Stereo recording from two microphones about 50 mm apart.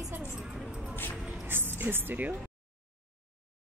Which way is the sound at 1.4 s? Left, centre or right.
Right.